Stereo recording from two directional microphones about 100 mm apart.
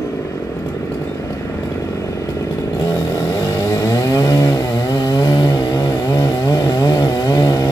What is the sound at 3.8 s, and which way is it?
Chainsaw, 35° left (ahead or behind).